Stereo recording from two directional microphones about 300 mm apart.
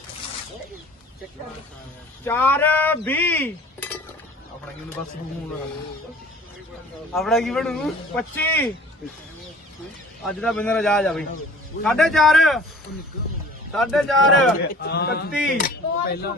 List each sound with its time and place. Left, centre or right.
2.2 s cutlery: centre
7.1 s speech: centre
10.2 s speech: centre
13.7 s speech: centre
14.8 s speech: left